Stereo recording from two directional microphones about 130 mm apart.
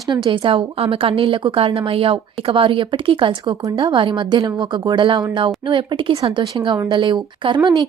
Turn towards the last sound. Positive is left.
turn(degrees=-35)  # may be behind; listen again after turning